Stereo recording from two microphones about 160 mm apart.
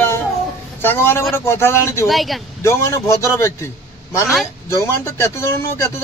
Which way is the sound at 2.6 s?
15° left (ahead or behind).